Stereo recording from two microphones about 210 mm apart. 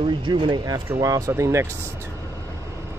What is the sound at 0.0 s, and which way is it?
Speech, 25° right (ahead or behind).